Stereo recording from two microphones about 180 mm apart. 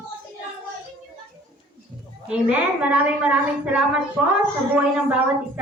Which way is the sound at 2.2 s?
5° right (ahead or behind).